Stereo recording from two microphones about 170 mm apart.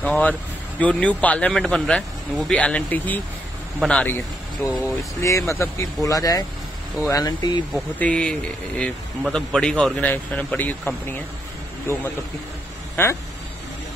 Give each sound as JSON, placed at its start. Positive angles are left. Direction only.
{"t": 0.0, "sound": "a man's voice", "side_deg": 10}
{"t": 5.2, "sound": "speech", "side_deg": 15}
{"t": 7.7, "sound": "a man's voice", "side_deg": 5}
{"t": 12.9, "sound": "speech", "side_deg": 15}